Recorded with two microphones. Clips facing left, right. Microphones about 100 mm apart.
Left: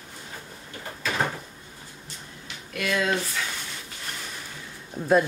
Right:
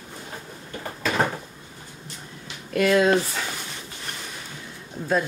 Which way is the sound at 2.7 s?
40° right (ahead or behind).